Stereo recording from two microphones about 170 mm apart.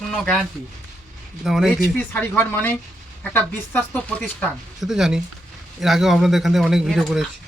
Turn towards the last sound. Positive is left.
turn(degrees=0)  # may be behind; listen again after turning